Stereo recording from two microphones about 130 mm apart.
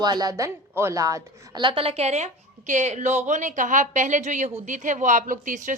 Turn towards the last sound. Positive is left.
turn(degrees=-80)